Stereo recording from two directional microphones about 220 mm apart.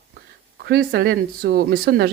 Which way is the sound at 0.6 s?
45° right (ahead or behind).